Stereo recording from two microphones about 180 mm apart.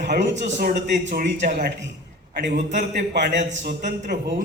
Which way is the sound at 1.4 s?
40° right (ahead or behind).